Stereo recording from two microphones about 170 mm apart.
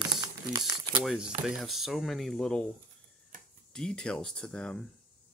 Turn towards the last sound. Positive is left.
turn(degrees=5)  # may be behind; listen again after turning